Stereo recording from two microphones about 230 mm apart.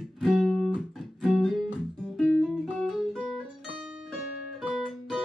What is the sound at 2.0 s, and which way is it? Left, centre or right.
Guitar, centre.